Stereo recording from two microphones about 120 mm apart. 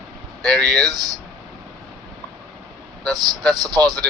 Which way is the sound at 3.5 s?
35° right (ahead or behind).